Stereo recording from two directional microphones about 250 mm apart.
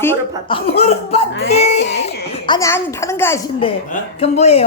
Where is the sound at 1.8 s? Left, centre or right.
Left.